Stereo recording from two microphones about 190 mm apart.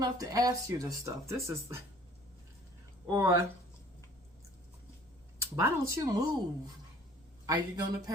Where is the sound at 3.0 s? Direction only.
20° right (ahead or behind).